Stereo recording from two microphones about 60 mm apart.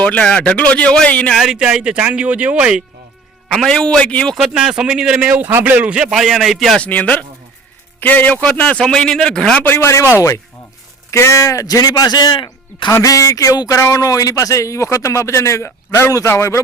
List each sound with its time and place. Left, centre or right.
0.0 s a man's voice: centre
1.5 s speech: centre
3.7 s a man's voice: centre
4.4 s speech: centre
5.3 s speech: right
6.0 s a man's voice: centre
6.7 s a man's voice: left
8.8 s a man's voice: centre
9.6 s a man's voice: left
10.2 s speech: left
11.1 s speech: left
12.9 s speech: left
15.9 s a man's voice: left